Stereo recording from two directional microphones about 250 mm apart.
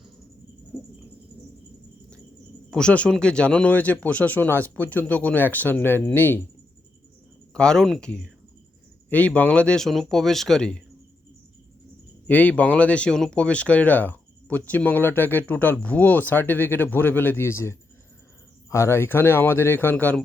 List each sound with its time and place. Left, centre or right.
0.7 s cricket: centre
2.6 s speech: centre
7.5 s speech: centre
12.3 s speech: centre